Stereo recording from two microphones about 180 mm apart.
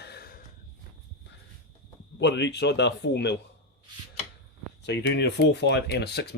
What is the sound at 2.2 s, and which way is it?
Speech, 75° left (ahead or behind).